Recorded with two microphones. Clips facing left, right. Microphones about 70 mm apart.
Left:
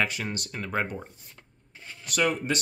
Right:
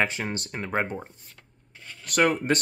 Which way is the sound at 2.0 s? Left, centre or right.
Right.